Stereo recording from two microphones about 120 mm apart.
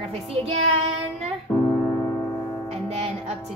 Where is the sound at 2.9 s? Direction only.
60° right (ahead or behind).